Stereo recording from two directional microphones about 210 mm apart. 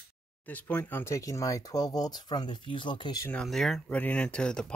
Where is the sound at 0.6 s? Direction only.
10° left (ahead or behind).